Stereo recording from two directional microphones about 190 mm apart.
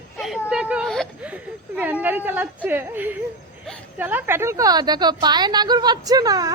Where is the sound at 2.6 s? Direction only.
10° right (ahead or behind).